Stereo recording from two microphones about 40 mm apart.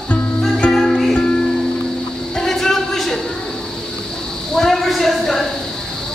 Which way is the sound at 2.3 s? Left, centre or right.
Centre.